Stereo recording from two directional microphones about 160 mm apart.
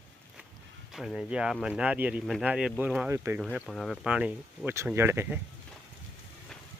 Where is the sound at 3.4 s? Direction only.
Centre (ahead or behind).